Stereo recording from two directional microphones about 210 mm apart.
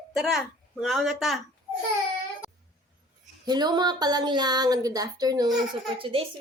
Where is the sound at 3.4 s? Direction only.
20° right (ahead or behind).